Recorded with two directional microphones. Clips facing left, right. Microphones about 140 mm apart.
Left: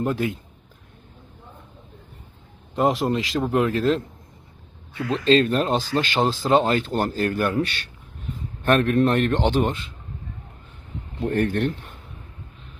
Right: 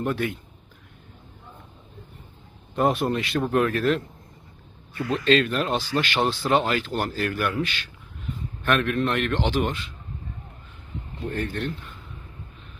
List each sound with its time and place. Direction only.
0.0 s speech: 25° left (ahead or behind)
2.7 s speech: 20° left (ahead or behind); by 6.0 s 40° left (ahead or behind)
6.1 s speech: 25° left (ahead or behind)
8.6 s a man's voice: 35° left (ahead or behind)
11.2 s speech: 55° left (ahead or behind)